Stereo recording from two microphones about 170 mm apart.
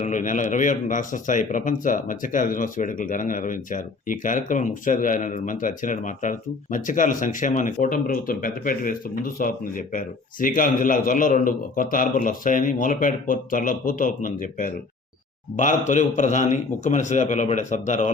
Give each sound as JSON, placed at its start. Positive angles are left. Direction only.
{"t": 0.0, "sound": "speech", "side_deg": 50}